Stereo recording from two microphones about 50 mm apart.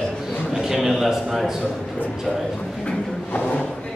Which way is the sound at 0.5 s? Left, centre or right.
Centre.